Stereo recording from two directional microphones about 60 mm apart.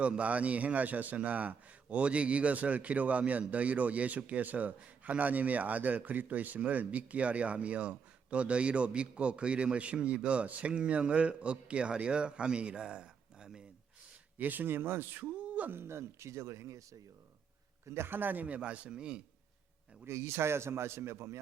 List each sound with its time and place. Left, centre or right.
0.0 s a man's voice: right
14.3 s speech: right
15.2 s a sound: right
15.7 s a man's voice: right
17.8 s a man's voice: right; by 19.2 s centre
20.1 s a man's voice: right